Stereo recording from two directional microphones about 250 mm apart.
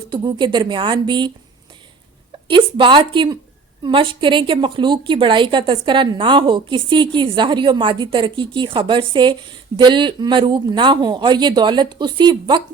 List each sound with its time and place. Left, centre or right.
0.1 s a woman's voice: centre
2.5 s a woman's voice: centre